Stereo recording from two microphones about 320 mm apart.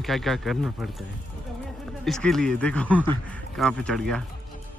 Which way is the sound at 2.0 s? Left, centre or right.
Centre.